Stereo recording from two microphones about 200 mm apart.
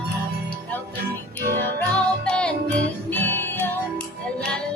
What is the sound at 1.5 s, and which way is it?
Music, 5° left (ahead or behind).